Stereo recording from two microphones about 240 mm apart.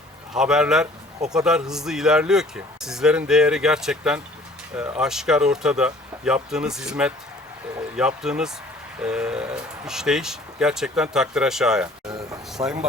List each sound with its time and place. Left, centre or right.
0.3 s speech: centre
12.0 s a sound: centre
12.6 s speech: centre